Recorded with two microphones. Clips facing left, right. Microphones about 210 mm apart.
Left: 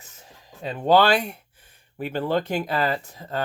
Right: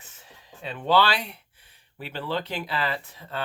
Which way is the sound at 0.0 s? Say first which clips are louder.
Left 2 dB; 40° left (ahead or behind).